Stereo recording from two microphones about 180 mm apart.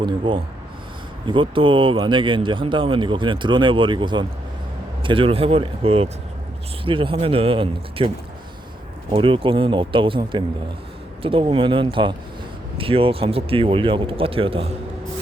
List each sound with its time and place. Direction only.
0.0 s speech: 30° right (ahead or behind)
9.1 s speech: 30° right (ahead or behind)